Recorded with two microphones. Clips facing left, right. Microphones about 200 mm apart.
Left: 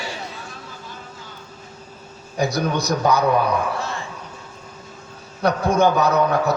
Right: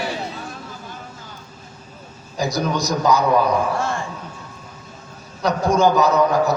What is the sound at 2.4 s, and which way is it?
Speech, 60° left (ahead or behind).